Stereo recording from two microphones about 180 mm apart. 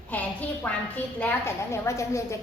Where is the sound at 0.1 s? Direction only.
10° left (ahead or behind).